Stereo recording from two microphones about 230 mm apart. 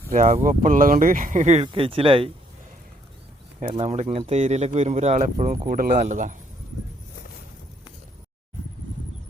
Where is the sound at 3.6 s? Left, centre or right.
Right.